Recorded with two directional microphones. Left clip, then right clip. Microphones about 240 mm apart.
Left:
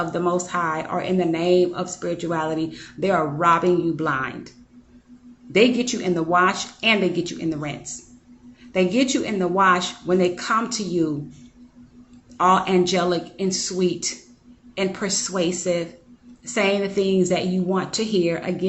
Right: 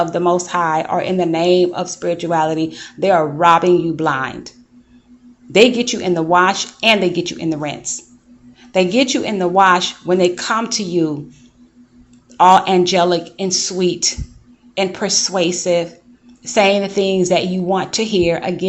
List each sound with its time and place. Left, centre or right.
0.0 s speech: right
12.4 s speech: right